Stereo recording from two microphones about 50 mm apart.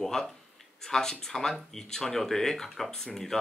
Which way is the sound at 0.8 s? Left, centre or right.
Centre.